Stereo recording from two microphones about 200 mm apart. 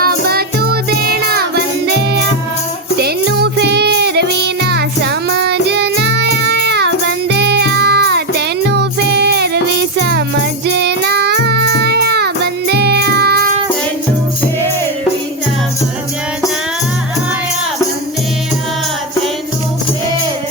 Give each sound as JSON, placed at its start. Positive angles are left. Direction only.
{"t": 0.0, "sound": "music", "side_deg": -50}
{"t": 3.0, "sound": "music", "side_deg": -55}
{"t": 10.0, "sound": "jingle bell", "side_deg": -55}
{"t": 10.8, "sound": "music", "side_deg": -55}